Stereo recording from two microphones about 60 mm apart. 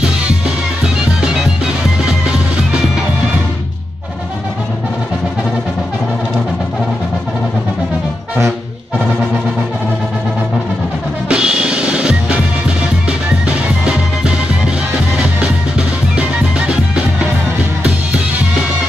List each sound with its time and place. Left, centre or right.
1.2 s music: centre
11.2 s music: centre
16.2 s music: centre